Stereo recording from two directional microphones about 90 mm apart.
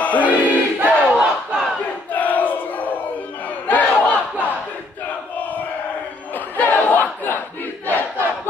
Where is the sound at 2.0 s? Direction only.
20° left (ahead or behind).